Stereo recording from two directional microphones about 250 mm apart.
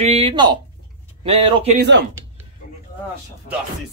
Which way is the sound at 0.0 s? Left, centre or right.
Right.